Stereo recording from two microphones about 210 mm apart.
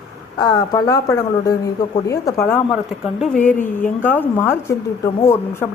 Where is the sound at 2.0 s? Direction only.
15° left (ahead or behind).